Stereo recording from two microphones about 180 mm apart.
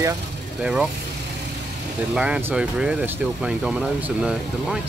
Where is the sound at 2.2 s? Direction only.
10° right (ahead or behind).